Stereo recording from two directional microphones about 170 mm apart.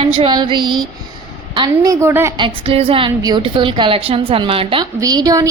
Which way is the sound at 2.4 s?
30° right (ahead or behind).